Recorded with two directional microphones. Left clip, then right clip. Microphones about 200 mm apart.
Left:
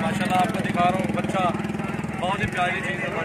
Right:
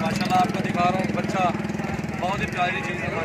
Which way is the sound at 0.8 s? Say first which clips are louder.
Left 1 dB; centre (ahead or behind).